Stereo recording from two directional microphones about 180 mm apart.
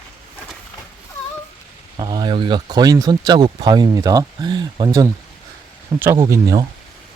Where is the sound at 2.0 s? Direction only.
20° right (ahead or behind).